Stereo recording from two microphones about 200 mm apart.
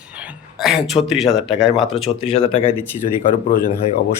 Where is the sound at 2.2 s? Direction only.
30° left (ahead or behind).